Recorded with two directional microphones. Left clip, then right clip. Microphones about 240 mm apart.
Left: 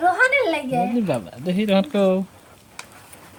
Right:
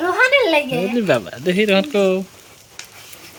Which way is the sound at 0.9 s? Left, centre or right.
Centre.